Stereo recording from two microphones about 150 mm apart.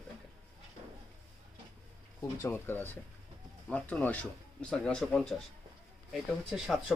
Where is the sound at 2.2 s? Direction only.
15° left (ahead or behind).